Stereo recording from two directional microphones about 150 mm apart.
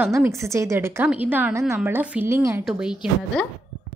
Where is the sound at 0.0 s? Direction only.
15° right (ahead or behind).